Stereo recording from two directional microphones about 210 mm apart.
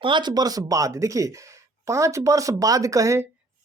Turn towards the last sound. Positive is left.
turn(degrees=-15)  # may be behind; listen again after turning